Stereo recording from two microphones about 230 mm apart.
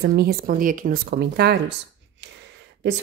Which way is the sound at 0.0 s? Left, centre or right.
Right.